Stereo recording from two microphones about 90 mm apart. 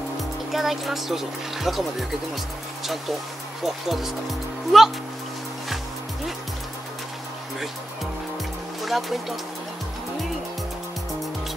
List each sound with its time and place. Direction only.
0.5 s speech: centre (ahead or behind)
3.6 s speech: centre (ahead or behind)
8.8 s speech: centre (ahead or behind)